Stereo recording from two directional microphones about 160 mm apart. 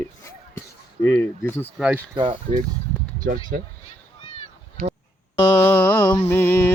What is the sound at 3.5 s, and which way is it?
Speech, 70° right (ahead or behind).